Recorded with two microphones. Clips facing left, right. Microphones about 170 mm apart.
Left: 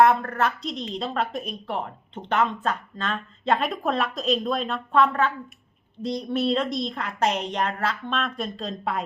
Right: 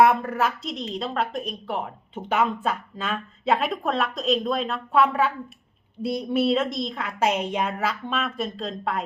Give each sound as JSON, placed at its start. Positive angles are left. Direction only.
{"t": 0.0, "sound": "a woman's voice", "side_deg": -10}